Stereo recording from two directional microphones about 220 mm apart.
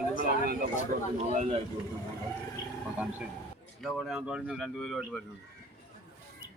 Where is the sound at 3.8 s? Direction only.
Centre (ahead or behind).